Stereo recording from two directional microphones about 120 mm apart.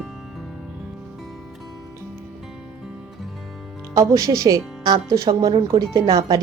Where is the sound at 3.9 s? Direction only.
30° right (ahead or behind).